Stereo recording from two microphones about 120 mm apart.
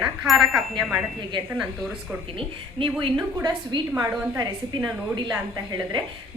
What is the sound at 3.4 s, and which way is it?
Speech, 35° right (ahead or behind).